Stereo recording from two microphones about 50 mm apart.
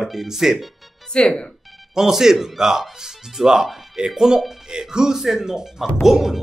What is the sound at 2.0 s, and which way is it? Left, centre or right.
Speech, centre.